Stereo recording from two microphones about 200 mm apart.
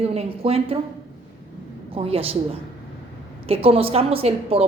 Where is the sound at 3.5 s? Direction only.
30° right (ahead or behind).